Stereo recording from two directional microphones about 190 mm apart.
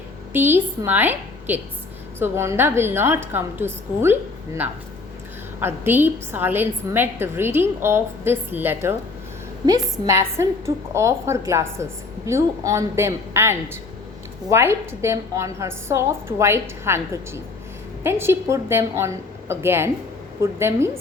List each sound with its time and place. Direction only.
0.3 s a woman's voice: 10° right (ahead or behind)